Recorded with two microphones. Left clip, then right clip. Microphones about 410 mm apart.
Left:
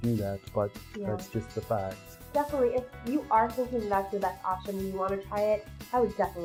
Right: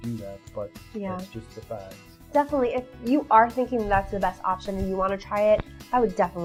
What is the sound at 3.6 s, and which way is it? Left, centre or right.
Speech, right.